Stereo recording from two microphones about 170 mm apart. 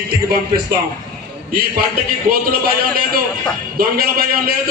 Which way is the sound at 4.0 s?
60° right (ahead or behind).